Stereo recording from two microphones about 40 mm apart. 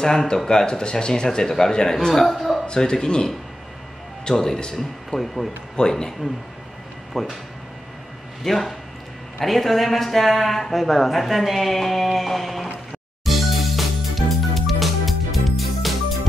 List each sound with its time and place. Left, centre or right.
0.0 s speech: centre
2.3 s a sound: centre
2.6 s speech: left; by 5.5 s centre
5.8 s speech: centre
7.2 s speech: centre
8.5 s speech: centre
13.2 s music: centre